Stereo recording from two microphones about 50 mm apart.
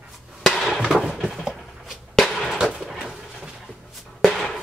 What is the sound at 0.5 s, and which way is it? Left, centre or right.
Hammer, centre.